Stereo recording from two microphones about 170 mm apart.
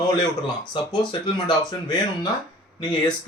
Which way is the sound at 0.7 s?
25° left (ahead or behind).